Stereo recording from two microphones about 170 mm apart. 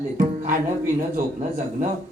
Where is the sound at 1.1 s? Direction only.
50° right (ahead or behind).